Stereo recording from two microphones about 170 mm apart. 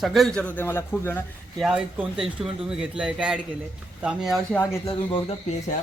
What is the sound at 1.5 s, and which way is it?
Speech, 5° right (ahead or behind).